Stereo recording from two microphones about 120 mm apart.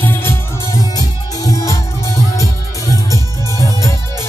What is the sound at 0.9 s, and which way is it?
Music, 30° left (ahead or behind).